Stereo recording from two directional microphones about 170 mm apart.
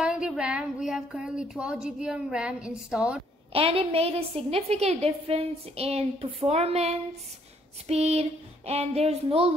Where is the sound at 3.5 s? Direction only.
35° right (ahead or behind).